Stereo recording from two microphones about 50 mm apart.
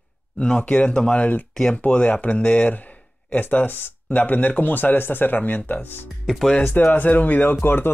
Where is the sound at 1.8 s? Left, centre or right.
Left.